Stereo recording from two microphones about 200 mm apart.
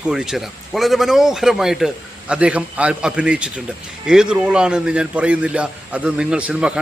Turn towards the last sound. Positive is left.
turn(degrees=-5)  # may be behind; listen again after turning